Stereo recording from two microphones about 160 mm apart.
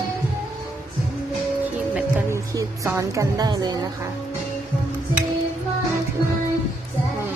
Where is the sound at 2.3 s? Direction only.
20° right (ahead or behind).